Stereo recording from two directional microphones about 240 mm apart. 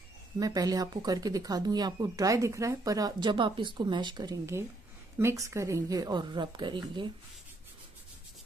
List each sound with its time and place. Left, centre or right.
0.4 s speech: centre